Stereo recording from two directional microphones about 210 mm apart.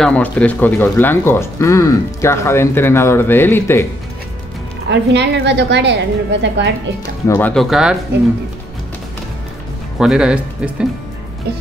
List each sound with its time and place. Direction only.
0.0 s speech: 5° left (ahead or behind)
4.8 s a woman's voice: 55° right (ahead or behind)
7.2 s speech: 10° left (ahead or behind)
9.9 s speech: 5° right (ahead or behind)